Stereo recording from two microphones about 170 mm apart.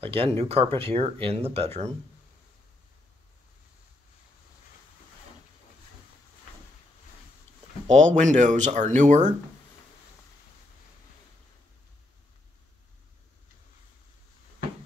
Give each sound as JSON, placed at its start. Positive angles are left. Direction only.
{"t": 0.0, "sound": "speech", "side_deg": -35}
{"t": 7.9, "sound": "speech", "side_deg": -45}